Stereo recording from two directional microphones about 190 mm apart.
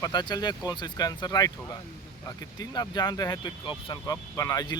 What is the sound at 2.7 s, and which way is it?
Speech, 20° left (ahead or behind).